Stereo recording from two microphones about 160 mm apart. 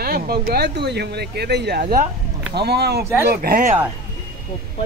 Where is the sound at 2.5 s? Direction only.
90° right.